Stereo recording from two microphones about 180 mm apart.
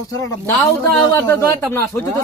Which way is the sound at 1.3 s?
15° left (ahead or behind).